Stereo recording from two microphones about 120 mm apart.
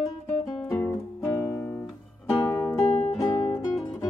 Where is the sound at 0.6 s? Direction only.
25° left (ahead or behind).